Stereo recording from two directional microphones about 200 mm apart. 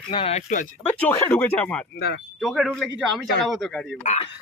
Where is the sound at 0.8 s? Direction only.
10° left (ahead or behind).